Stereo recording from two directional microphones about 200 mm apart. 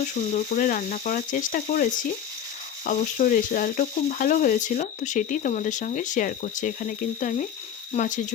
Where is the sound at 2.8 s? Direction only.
40° left (ahead or behind).